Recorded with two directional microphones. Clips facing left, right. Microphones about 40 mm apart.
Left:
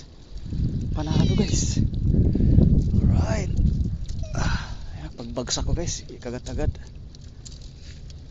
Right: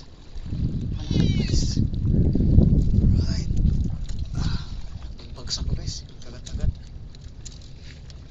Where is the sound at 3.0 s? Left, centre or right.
Left.